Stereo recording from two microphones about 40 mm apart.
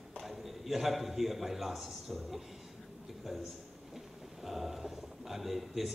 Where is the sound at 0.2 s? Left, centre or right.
Centre.